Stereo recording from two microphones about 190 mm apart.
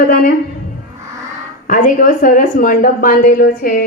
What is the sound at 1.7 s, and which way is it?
A woman's voice, 45° left (ahead or behind).